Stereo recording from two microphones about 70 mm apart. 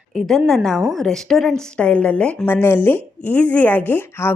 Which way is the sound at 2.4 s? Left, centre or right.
Left.